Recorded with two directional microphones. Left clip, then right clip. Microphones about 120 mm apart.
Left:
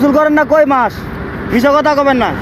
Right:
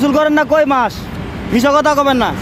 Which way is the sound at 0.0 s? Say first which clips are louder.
Left 2 dB; 30° right (ahead or behind).